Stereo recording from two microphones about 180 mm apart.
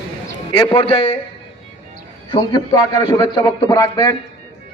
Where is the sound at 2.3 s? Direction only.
25° left (ahead or behind).